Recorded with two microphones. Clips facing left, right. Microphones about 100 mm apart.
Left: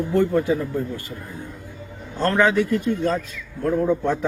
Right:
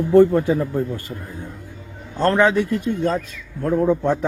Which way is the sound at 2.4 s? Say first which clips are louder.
Right 1 dB; 25° right (ahead or behind).